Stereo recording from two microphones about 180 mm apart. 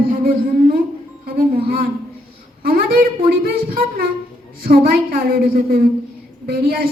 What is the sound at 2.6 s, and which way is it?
Speech, 55° right (ahead or behind).